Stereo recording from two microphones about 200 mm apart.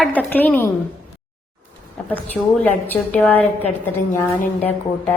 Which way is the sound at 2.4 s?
5° right (ahead or behind).